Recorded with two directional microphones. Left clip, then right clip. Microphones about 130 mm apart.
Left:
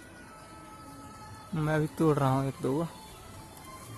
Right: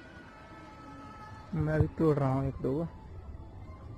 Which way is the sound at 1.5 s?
25° left (ahead or behind).